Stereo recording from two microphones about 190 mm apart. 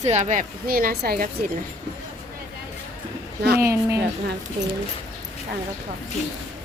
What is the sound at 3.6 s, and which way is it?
Speech, 15° right (ahead or behind).